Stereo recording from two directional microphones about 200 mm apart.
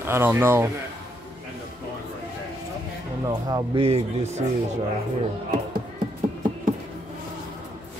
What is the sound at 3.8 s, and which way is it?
Speech, 30° right (ahead or behind).